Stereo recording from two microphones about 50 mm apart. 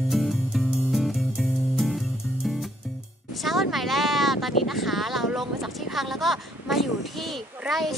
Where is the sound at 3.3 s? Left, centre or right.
Centre.